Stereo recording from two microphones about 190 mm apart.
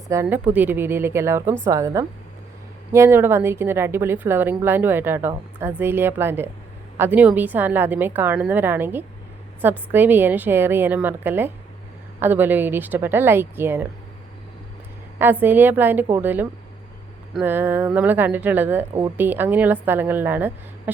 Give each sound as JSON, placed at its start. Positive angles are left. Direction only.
{"t": 0.1, "sound": "a woman's voice", "side_deg": -10}
{"t": 15.2, "sound": "a woman's voice", "side_deg": -10}